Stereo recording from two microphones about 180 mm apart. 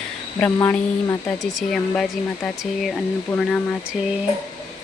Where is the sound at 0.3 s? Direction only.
10° left (ahead or behind).